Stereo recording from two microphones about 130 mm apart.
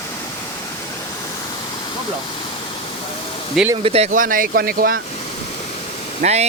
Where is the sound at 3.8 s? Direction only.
50° right (ahead or behind).